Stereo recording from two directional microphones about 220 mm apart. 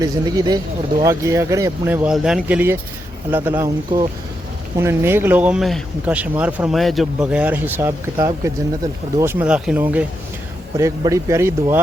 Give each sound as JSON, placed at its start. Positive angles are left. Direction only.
{"t": 0.0, "sound": "speech", "side_deg": -15}